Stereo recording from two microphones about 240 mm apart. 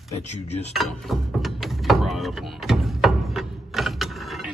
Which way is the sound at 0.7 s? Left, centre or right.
Centre.